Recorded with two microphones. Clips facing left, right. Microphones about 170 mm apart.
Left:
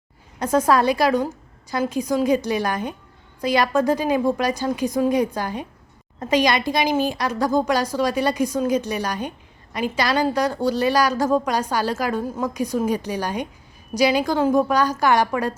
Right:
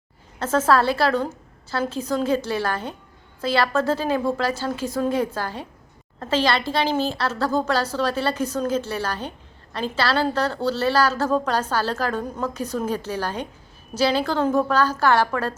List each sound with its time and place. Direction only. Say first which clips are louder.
0.3 s a woman's voice: left 1 dB; 15° left (ahead or behind)